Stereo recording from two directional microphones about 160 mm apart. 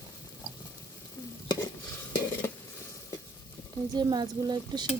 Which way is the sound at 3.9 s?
25° right (ahead or behind).